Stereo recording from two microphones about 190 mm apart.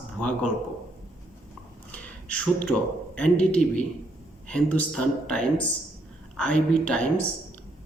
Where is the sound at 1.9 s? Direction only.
5° left (ahead or behind).